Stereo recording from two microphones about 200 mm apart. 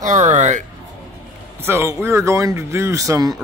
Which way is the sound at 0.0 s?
35° right (ahead or behind).